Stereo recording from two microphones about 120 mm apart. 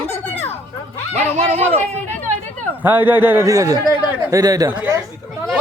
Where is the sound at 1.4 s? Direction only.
65° right (ahead or behind).